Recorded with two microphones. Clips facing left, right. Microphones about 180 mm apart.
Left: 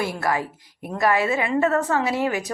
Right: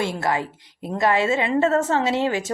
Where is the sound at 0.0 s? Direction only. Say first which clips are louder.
Right 1 dB; 25° right (ahead or behind).